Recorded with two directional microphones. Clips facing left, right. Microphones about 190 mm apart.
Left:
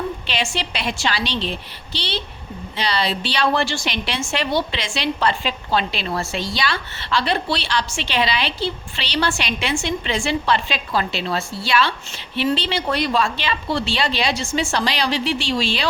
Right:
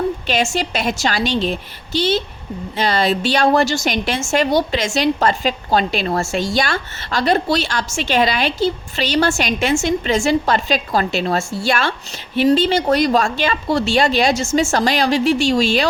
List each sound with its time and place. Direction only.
0.3 s a woman's voice: 45° right (ahead or behind)